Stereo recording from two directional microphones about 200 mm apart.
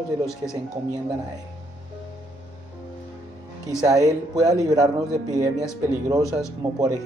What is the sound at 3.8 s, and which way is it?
A man's voice, 15° right (ahead or behind).